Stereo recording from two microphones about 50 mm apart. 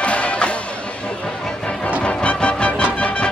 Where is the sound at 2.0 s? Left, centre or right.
Left.